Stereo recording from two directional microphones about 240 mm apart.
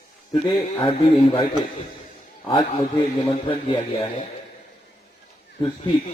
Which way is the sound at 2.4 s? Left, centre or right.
Left.